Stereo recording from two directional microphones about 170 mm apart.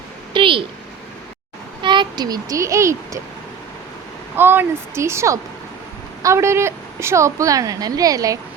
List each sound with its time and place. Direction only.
0.3 s a sound: 30° right (ahead or behind)
1.8 s a child's voice: 25° right (ahead or behind)
4.4 s a woman's voice: 10° right (ahead or behind)